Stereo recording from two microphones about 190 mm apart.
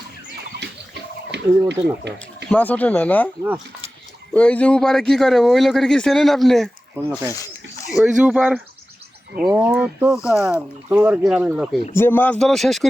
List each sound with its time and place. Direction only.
1.3 s speech: 65° right (ahead or behind)
2.5 s speech: 10° left (ahead or behind)
4.4 s speech: 5° left (ahead or behind)
7.9 s speech: 5° right (ahead or behind)
11.9 s speech: 10° left (ahead or behind)